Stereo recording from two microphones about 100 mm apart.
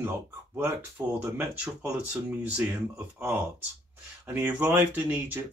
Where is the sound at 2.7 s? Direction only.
20° right (ahead or behind).